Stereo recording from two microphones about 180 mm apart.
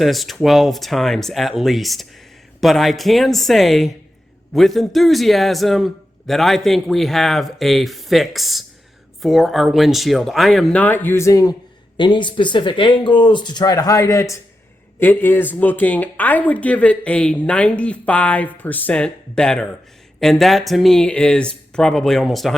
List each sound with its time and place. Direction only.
0.0 s a man's voice: centre (ahead or behind)